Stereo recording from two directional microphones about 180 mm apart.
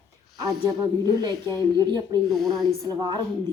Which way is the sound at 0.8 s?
20° right (ahead or behind).